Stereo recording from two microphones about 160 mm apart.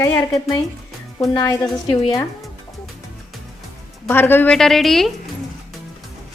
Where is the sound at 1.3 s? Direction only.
25° left (ahead or behind).